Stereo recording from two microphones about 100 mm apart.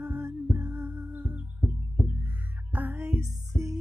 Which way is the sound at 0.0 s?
30° right (ahead or behind).